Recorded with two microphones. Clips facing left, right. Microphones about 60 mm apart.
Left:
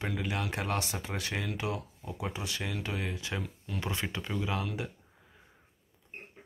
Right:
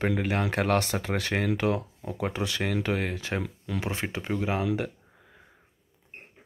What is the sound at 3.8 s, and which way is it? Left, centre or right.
Speech, right.